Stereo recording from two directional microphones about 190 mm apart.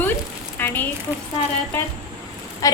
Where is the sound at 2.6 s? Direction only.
20° left (ahead or behind).